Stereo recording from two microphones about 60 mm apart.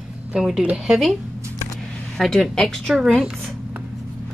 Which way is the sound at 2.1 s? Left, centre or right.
Centre.